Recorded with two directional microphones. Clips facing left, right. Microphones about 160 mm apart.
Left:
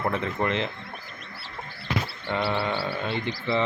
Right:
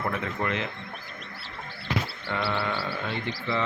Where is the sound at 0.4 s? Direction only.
30° left (ahead or behind).